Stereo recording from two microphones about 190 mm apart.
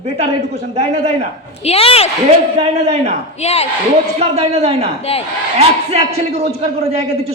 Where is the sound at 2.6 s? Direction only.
35° right (ahead or behind).